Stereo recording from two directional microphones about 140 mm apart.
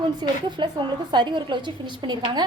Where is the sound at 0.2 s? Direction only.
35° right (ahead or behind).